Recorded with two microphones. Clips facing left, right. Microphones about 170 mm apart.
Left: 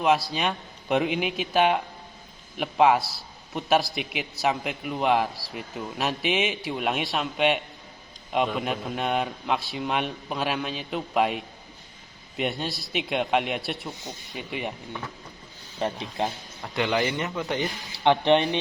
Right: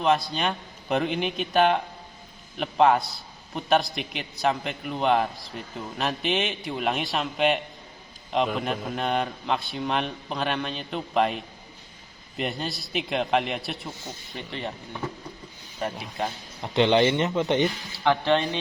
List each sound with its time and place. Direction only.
0.0 s a man's voice: 5° left (ahead or behind)
14.0 s speech: 15° left (ahead or behind)
15.8 s speech: 25° left (ahead or behind)
16.7 s speech: 25° right (ahead or behind)
18.0 s speech: 20° left (ahead or behind)